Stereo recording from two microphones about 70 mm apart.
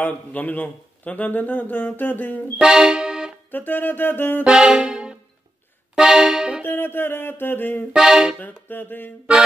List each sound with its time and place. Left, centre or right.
0.0 s speech: left
2.6 s music: centre
3.5 s speech: left
4.5 s music: centre
6.6 s a sound: left
7.9 s music: centre
8.4 s speech: left